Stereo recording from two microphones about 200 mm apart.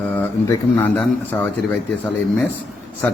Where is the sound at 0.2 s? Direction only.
10° left (ahead or behind).